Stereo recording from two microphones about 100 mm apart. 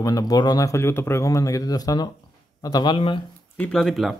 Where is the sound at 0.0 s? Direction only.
40° left (ahead or behind).